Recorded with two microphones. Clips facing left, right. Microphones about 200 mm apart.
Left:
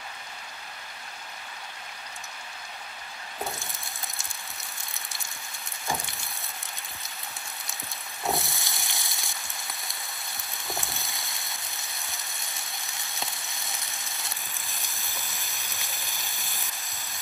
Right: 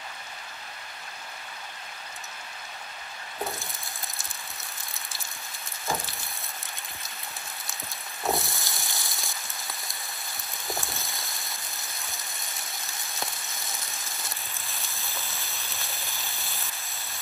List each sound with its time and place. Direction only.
8.2 s frying: centre (ahead or behind)
10.6 s a sound: centre (ahead or behind)
14.7 s rain on surface: 15° left (ahead or behind)